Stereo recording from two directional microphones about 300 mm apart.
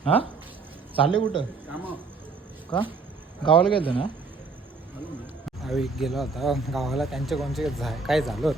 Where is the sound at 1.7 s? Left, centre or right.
Centre.